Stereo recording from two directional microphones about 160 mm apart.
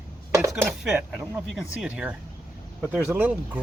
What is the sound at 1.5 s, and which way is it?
Speech, 5° right (ahead or behind).